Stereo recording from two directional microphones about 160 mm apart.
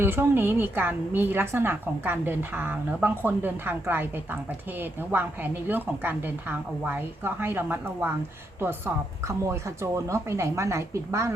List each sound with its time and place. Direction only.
0.0 s a woman's voice: 15° right (ahead or behind)
9.2 s a woman's voice: 20° right (ahead or behind)